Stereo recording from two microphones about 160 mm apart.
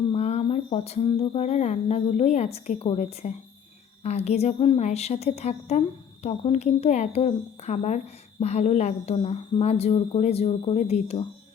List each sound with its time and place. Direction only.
0.1 s speech: 40° left (ahead or behind)